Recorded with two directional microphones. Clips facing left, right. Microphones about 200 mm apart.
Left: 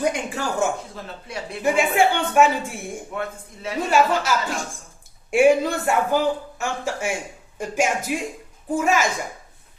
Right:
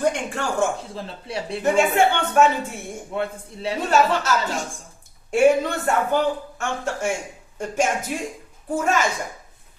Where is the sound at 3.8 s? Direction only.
10° left (ahead or behind).